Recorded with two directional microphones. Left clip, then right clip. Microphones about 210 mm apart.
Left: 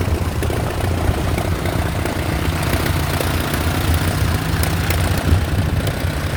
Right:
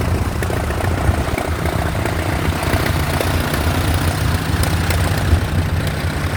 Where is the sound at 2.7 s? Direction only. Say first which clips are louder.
Right 2 dB; 55° left (ahead or behind).